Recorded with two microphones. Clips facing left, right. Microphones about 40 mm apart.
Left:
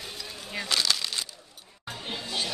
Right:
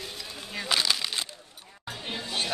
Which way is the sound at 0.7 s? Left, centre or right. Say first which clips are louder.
Right 1 dB; centre.